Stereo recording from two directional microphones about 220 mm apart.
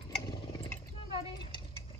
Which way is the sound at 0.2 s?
15° left (ahead or behind).